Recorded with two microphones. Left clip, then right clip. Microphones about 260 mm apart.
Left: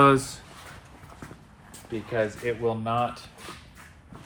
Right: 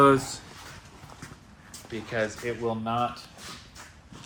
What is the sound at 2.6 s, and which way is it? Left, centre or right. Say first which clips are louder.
Speech: left 1 dB; left.